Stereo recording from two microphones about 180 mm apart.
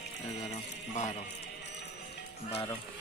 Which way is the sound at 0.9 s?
40° left (ahead or behind).